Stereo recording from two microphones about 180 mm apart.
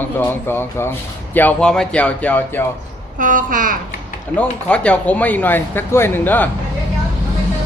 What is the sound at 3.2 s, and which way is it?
Speech, 45° right (ahead or behind).